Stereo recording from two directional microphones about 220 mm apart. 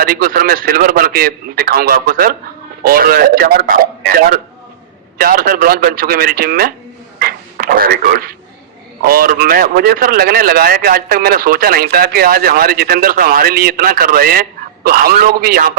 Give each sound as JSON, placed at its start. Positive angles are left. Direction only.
{"t": 0.0, "sound": "a man's voice", "side_deg": -40}
{"t": 7.2, "sound": "a sound", "side_deg": -40}
{"t": 9.0, "sound": "a man's voice", "side_deg": -40}